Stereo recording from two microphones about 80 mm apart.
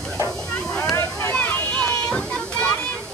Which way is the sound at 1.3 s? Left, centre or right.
Centre.